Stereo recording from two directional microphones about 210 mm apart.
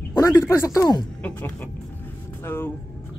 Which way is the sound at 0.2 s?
15° left (ahead or behind).